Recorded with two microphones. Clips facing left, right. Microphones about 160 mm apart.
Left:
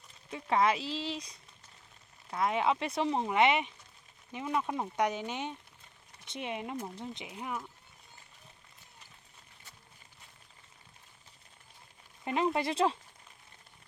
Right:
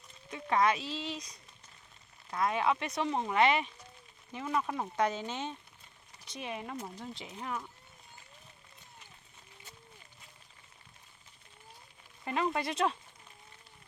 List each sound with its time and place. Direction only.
0.3 s speech: 30° left (ahead or behind); by 7.7 s 10° left (ahead or behind)
12.2 s speech: 20° left (ahead or behind)